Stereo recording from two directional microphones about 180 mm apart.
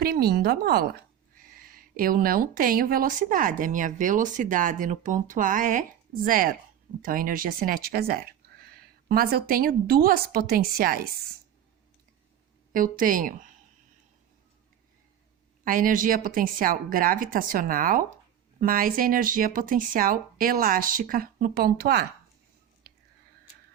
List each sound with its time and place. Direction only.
0.0 s a woman's voice: 60° right (ahead or behind)
12.7 s a woman's voice: 50° right (ahead or behind)
15.6 s a woman's voice: 50° right (ahead or behind)